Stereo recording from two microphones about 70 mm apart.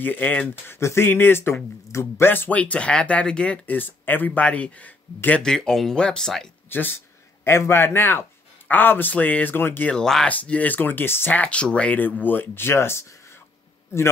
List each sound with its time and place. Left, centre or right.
0.0 s speech: left
0.7 s speech: left; by 3.5 s centre
3.6 s speech: left
5.4 s speech: centre
6.7 s speech: left
9.8 s speech: centre; by 11.3 s left
11.3 s speech: centre; by 13.0 s left